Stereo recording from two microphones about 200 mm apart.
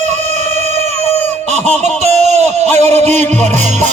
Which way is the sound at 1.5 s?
35° right (ahead or behind).